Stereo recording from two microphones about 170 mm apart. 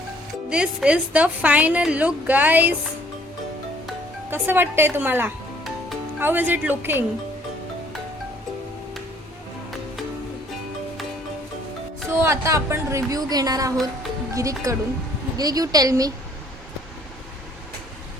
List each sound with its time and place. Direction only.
0.5 s a woman's voice: 5° right (ahead or behind)
4.3 s a woman's voice: 10° right (ahead or behind)
12.0 s a woman's voice: 15° right (ahead or behind)